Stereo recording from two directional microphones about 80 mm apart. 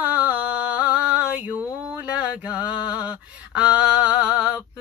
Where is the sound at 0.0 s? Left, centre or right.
Centre.